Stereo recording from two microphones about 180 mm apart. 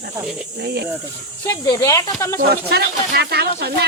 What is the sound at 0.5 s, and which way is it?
Speech, 65° right (ahead or behind).